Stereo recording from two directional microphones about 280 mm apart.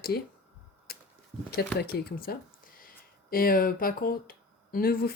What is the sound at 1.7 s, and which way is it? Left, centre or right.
Speech, left.